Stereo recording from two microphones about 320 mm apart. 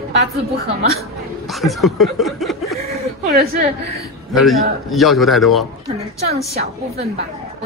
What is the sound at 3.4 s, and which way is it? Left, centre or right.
Speech, right.